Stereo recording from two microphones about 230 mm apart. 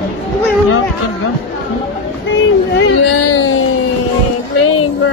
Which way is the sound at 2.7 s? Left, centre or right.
Left.